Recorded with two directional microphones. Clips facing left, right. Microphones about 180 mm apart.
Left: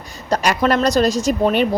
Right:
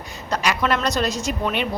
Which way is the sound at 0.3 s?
40° left (ahead or behind).